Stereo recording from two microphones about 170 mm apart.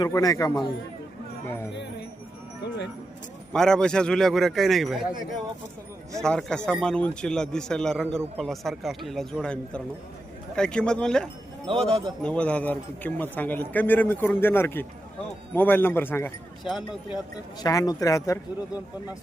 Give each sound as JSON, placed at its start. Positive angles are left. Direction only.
{"t": 0.0, "sound": "a man's voice", "side_deg": 20}
{"t": 1.7, "sound": "speech", "side_deg": 90}
{"t": 3.5, "sound": "a man's voice", "side_deg": 5}
{"t": 6.2, "sound": "a man's voice", "side_deg": 5}
{"t": 11.9, "sound": "speech", "side_deg": -25}
{"t": 12.2, "sound": "speech", "side_deg": 5}
{"t": 16.6, "sound": "a man's voice", "side_deg": 0}
{"t": 17.6, "sound": "a man's voice", "side_deg": 20}